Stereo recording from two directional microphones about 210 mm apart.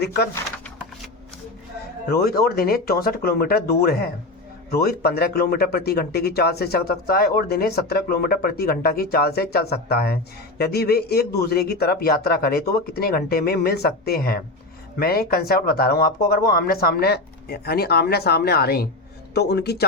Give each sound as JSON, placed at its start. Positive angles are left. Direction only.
{"t": 2.2, "sound": "speech", "side_deg": 45}